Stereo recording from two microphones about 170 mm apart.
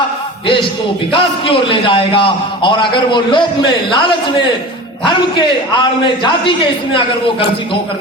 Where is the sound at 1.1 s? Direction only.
30° left (ahead or behind).